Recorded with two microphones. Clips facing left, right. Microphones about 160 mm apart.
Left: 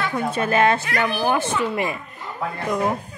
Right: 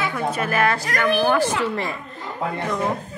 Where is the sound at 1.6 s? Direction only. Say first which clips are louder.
Left 1 dB; 15° left (ahead or behind).